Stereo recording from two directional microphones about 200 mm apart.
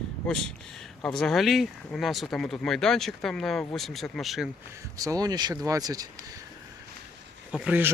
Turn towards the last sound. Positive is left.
turn(degrees=-5)  # may be behind; listen again after turning